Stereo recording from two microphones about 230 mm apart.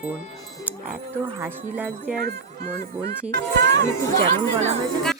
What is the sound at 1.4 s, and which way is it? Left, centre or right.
Speech, centre.